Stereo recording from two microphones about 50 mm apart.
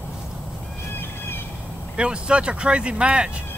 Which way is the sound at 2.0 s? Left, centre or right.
Centre.